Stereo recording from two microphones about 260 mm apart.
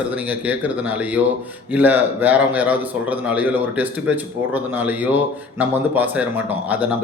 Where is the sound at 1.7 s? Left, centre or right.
Centre.